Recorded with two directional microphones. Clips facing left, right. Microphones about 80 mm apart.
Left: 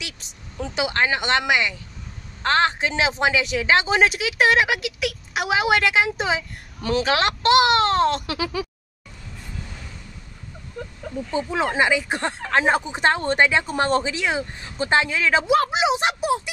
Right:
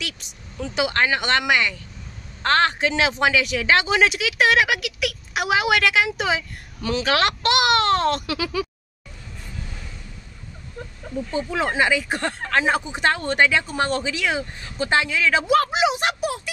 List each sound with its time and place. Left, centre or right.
0.2 s speech: left
6.8 s speech: left
7.1 s speech: left
11.3 s speech: left
15.4 s speech: left